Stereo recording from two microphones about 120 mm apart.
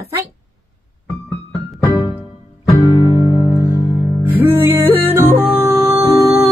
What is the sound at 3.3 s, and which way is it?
Music, 30° left (ahead or behind).